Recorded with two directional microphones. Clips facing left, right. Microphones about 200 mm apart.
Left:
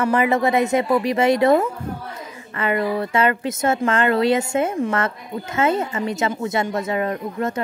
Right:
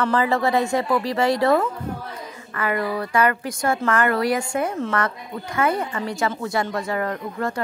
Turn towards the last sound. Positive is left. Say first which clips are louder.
# left 2 dB
turn(degrees=20)  # may be behind; listen again after turning